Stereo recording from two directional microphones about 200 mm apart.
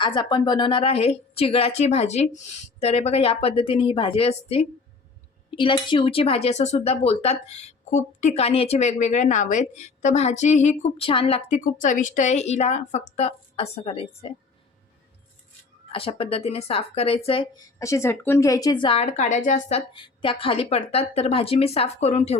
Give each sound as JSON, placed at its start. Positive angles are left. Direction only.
{"t": 0.0, "sound": "a woman's voice", "side_deg": 25}
{"t": 15.9, "sound": "a woman's voice", "side_deg": 25}